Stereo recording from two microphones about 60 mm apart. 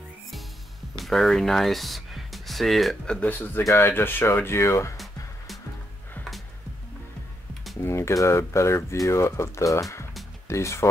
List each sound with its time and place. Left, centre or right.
0.9 s speech: centre
3.1 s speech: left
4.9 s music: centre
7.8 s speech: left
10.5 s speech: left